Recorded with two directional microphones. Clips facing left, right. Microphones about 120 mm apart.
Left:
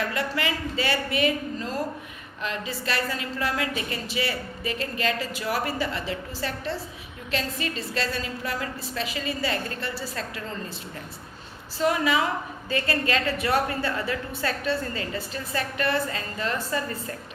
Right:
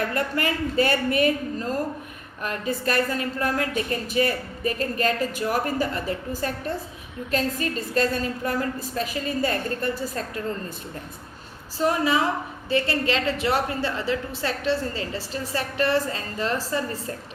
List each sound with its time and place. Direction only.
0.1 s a woman's voice: 45° right (ahead or behind)
11.8 s a woman's voice: 35° right (ahead or behind)